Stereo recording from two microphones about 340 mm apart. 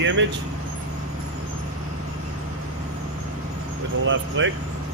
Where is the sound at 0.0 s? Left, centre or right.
Right.